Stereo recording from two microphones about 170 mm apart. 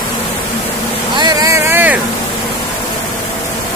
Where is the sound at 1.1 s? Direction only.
20° right (ahead or behind).